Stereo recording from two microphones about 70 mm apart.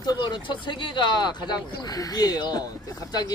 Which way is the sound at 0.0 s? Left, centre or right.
Left.